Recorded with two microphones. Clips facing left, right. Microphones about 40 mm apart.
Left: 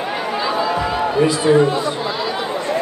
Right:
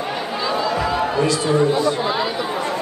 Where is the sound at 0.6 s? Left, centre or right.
Centre.